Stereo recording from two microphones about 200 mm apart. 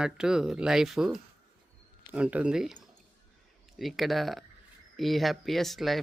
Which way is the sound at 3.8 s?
Centre (ahead or behind).